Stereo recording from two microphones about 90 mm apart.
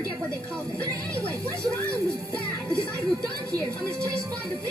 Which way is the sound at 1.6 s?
35° right (ahead or behind).